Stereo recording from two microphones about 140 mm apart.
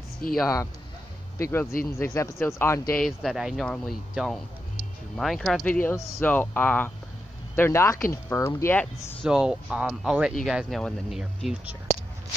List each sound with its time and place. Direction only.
0.2 s speech: 90° left
1.4 s speech: 15° left (ahead or behind)
3.0 s speech: centre (ahead or behind); by 9.1 s 20° left (ahead or behind)
9.2 s speech: 5° right (ahead or behind)